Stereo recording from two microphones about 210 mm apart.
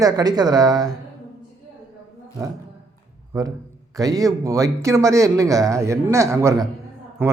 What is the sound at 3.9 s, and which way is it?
Speech, 15° right (ahead or behind).